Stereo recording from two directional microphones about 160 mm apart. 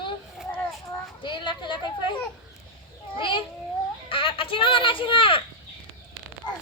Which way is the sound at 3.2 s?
30° left (ahead or behind).